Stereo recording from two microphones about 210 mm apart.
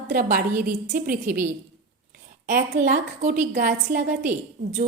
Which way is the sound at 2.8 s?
35° right (ahead or behind).